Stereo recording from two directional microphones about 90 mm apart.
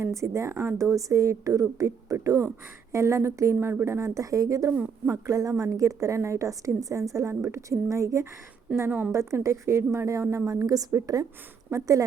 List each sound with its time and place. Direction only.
0.0 s a woman's voice: 35° right (ahead or behind)
4.7 s a woman's voice: 20° right (ahead or behind)
5.1 s a woman's voice: 40° right (ahead or behind)
8.7 s a woman's voice: 25° right (ahead or behind)
9.1 s a woman's voice: 35° right (ahead or behind)